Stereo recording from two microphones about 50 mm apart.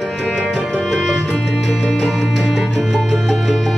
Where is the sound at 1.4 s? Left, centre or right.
Centre.